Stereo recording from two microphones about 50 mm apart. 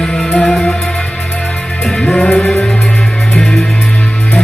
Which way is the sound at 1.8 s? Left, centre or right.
Centre.